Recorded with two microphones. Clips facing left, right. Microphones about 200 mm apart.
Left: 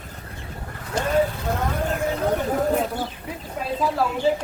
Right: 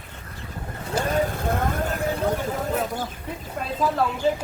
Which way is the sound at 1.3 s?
50° right (ahead or behind).